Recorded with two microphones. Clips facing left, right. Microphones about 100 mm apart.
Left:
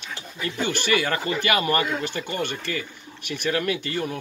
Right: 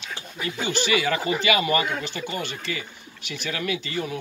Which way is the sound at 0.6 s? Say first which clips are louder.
Left 1 dB; 50° left (ahead or behind).